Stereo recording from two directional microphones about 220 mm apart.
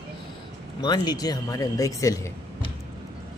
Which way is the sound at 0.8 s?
20° left (ahead or behind).